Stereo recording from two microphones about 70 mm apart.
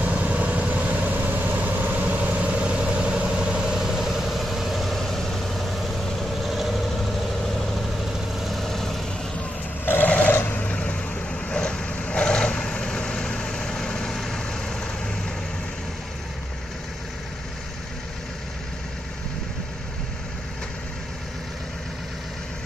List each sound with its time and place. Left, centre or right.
0.0 s vehicle: right; by 7.0 s centre
8.5 s vehicle: centre
9.8 s vehicle: left; by 14.8 s centre